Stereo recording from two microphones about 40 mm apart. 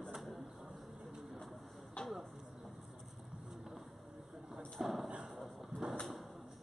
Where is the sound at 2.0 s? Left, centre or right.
Left.